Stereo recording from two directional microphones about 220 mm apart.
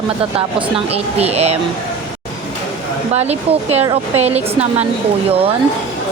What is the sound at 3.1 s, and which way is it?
Speech, 30° right (ahead or behind).